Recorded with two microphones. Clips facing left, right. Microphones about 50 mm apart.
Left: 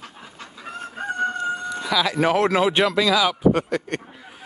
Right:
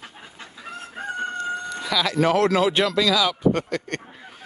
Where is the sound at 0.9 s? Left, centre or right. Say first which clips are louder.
Left 4 dB; centre.